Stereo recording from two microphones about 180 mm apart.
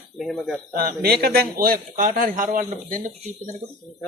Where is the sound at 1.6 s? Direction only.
50° right (ahead or behind).